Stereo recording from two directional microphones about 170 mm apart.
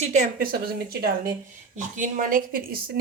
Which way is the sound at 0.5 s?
65° right (ahead or behind).